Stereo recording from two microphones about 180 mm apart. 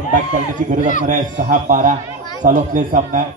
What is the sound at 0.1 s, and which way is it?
A man's voice, 45° right (ahead or behind).